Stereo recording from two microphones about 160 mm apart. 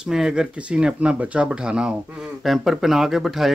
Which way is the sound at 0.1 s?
5° right (ahead or behind).